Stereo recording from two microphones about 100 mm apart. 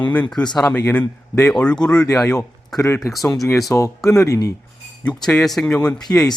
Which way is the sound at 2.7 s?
35° left (ahead or behind).